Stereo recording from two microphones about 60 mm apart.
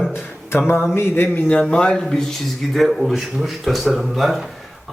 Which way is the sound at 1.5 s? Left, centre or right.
Centre.